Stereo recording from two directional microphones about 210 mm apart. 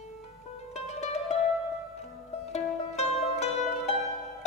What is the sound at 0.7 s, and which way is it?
Music, 30° left (ahead or behind).